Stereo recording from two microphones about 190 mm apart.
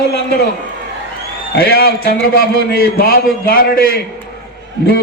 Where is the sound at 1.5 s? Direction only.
55° left (ahead or behind).